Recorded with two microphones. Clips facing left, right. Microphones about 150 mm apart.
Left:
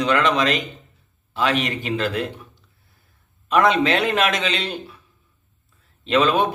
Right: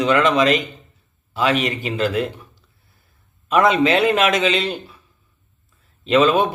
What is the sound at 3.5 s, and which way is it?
A man's voice, 5° right (ahead or behind).